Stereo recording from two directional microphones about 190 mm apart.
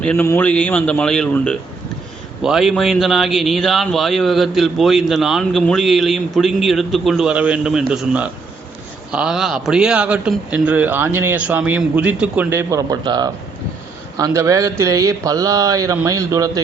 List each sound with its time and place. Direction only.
0.0 s a man's voice: 10° left (ahead or behind); by 16.5 s 15° right (ahead or behind)